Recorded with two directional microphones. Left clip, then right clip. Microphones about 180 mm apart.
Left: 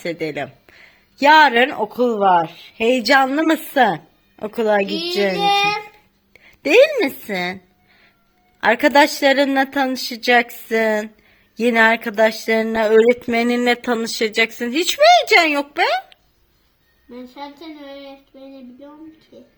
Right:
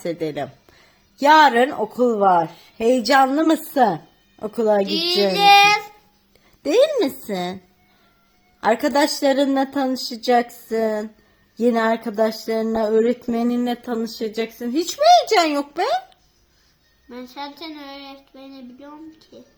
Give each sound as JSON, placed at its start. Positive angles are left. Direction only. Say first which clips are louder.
{"t": 0.0, "sound": "a woman's voice", "louder": "left 1 dB", "side_deg": 0}
{"t": 8.6, "sound": "a woman's voice", "louder": "left 5 dB", "side_deg": 10}
{"t": 13.3, "sound": "a woman's voice", "louder": "left 6 dB", "side_deg": 20}
{"t": 17.1, "sound": "a sound", "louder": "right 1 dB", "side_deg": 5}
{"t": 19.3, "sound": "a woman's voice", "louder": "left 1 dB", "side_deg": 5}